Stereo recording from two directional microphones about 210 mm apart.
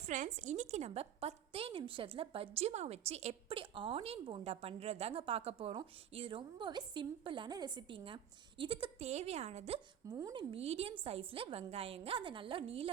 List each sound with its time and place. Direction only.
0.1 s a woman's voice: 35° right (ahead or behind)
10.2 s speech: 15° right (ahead or behind)
10.5 s a woman's voice: 30° right (ahead or behind)